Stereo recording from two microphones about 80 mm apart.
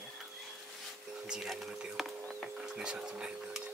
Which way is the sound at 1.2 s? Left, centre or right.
Centre.